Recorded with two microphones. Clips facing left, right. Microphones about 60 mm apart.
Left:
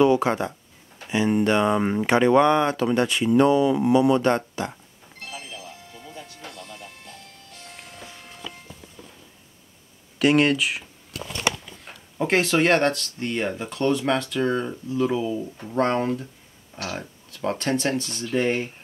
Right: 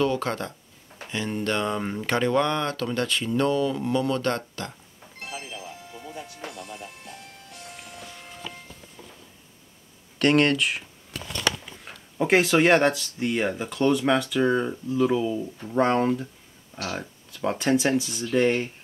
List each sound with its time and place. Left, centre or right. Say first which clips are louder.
0.0 s speech: left 6 dB; centre
5.2 s music: right 1 dB; centre
7.7 s music: left 1 dB; centre
10.1 s a sound: left 1 dB; centre
12.2 s speech: right 1 dB; centre
18.3 s speech: right 1 dB; centre